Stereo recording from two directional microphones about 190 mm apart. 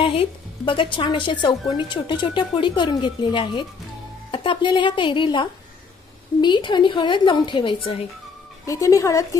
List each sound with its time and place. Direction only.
0.0 s speech: 30° left (ahead or behind)
8.6 s speech: 15° left (ahead or behind)